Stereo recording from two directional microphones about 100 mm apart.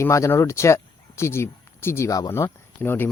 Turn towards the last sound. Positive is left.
turn(degrees=20)  # may be behind; listen again after turning